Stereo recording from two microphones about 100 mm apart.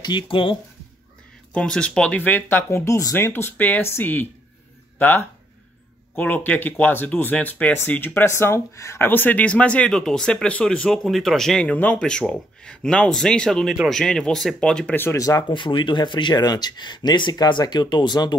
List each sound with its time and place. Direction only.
0.0 s speech: 55° left (ahead or behind)
1.5 s speech: 10° left (ahead or behind); by 3.3 s 30° left (ahead or behind)
3.3 s speech: 20° left (ahead or behind)
15.0 s speech: 30° left (ahead or behind)
15.4 s speech: 55° left (ahead or behind)